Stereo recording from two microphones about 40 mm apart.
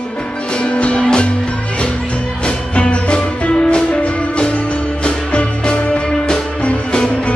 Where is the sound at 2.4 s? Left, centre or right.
Left.